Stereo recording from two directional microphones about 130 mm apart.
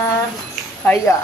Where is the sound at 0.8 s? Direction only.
20° left (ahead or behind).